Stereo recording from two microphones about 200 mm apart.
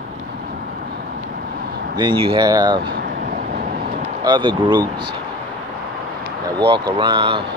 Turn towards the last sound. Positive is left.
turn(degrees=-25)  # may be behind; listen again after turning